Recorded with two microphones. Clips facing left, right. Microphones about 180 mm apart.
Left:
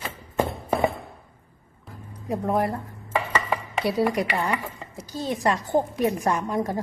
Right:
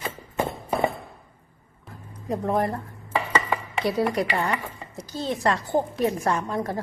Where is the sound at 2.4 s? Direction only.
Centre (ahead or behind).